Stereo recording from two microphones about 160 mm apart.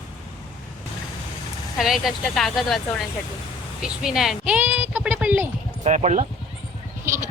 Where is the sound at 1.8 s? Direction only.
Centre (ahead or behind).